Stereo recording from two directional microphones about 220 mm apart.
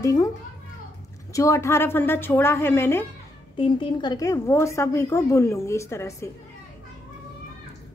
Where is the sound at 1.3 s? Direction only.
15° left (ahead or behind).